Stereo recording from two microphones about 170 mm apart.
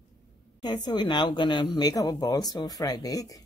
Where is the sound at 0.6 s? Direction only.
25° left (ahead or behind).